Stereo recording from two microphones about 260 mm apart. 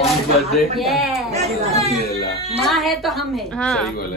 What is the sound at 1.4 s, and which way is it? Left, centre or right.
Speech, right.